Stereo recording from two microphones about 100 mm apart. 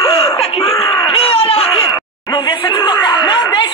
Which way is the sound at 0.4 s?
90° left.